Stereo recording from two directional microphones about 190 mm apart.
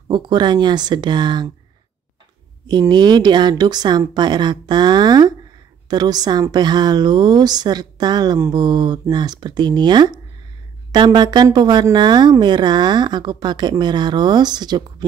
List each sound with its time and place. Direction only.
0.1 s a woman's voice: 25° right (ahead or behind)
2.6 s a woman's voice: 20° right (ahead or behind)